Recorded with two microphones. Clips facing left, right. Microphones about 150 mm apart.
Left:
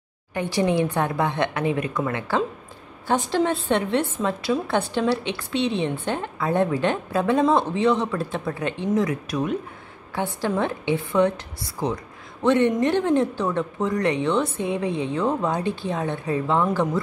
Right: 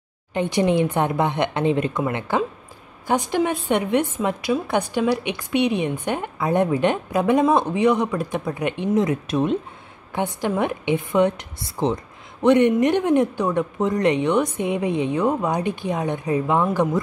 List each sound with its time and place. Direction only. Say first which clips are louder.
0.3 s a woman's voice: right 3 dB; 20° right (ahead or behind)